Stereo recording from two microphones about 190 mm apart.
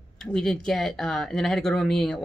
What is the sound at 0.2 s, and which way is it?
Speech, 5° left (ahead or behind).